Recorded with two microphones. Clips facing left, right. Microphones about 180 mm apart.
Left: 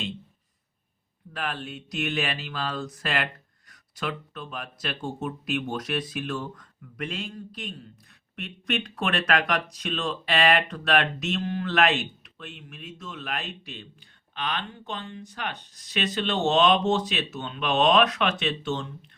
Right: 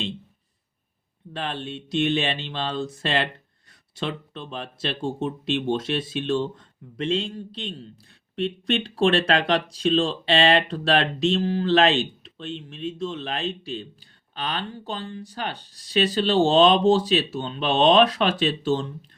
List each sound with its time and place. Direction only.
1.3 s speech: 25° right (ahead or behind)